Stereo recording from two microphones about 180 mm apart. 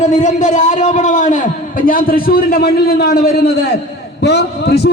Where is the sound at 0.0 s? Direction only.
45° left (ahead or behind).